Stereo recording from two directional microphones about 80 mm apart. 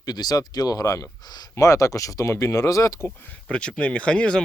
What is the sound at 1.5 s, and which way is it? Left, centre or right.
Speech, left.